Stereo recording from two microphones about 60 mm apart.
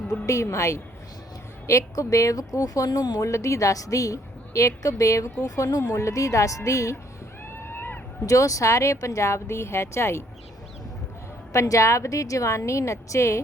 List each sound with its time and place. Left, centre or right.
0.4 s a woman's voice: left
1.6 s speech: left
2.5 s a woman's voice: left
5.9 s speech: left
7.6 s a sound: left
8.3 s speech: left
11.5 s speech: left